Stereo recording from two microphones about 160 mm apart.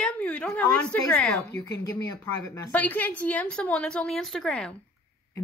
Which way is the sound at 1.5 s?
20° left (ahead or behind).